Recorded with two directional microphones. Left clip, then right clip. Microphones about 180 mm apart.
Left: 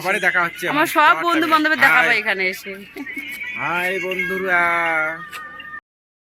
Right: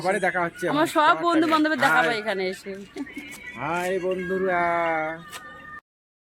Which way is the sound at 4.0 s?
30° right (ahead or behind).